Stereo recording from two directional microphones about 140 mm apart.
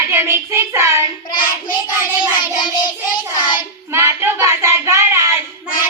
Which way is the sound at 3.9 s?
20° right (ahead or behind).